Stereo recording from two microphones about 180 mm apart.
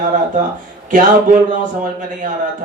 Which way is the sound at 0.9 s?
45° right (ahead or behind).